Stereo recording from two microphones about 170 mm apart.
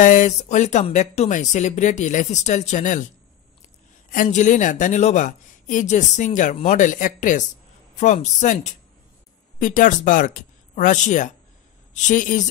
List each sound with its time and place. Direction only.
0.0 s speech: 50° left (ahead or behind)
4.1 s speech: 50° left (ahead or behind)